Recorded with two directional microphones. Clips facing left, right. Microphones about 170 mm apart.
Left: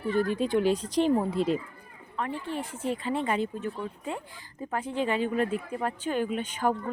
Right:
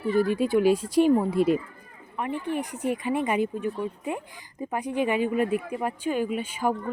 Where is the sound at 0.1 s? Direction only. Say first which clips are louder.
Right 3 dB; 10° right (ahead or behind).